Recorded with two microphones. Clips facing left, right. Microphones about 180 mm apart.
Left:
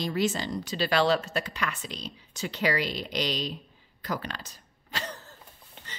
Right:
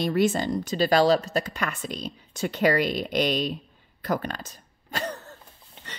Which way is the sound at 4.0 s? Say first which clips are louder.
Right 6 dB; 50° right (ahead or behind).